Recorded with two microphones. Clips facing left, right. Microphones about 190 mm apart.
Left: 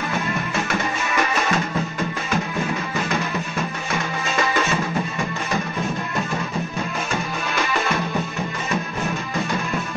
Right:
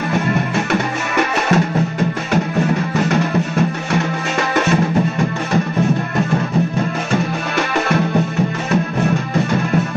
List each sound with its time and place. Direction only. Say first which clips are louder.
0.3 s music: right 7 dB; 55° right (ahead or behind)